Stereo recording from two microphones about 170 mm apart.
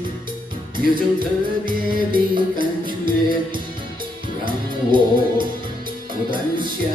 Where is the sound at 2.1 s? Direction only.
30° right (ahead or behind).